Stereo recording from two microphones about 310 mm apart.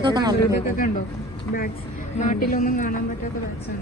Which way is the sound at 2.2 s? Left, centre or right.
Left.